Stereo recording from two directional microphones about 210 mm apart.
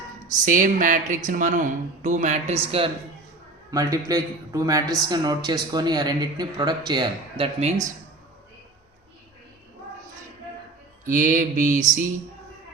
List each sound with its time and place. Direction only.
0.4 s speech: 40° right (ahead or behind)
3.7 s a man's voice: 15° right (ahead or behind)
11.0 s speech: 40° right (ahead or behind)